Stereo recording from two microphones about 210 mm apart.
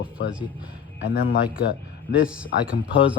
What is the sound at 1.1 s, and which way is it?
Speech, 45° left (ahead or behind).